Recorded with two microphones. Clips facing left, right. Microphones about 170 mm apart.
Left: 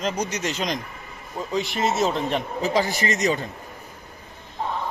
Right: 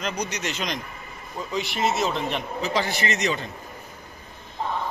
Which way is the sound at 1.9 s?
40° left (ahead or behind).